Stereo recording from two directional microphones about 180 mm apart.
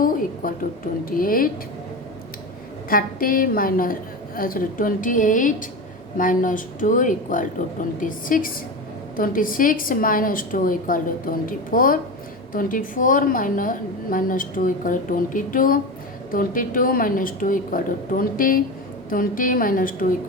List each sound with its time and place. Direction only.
0.0 s a sound: 50° left (ahead or behind)
1.1 s a woman's voice: 50° left (ahead or behind)
2.9 s a woman's voice: 50° left (ahead or behind)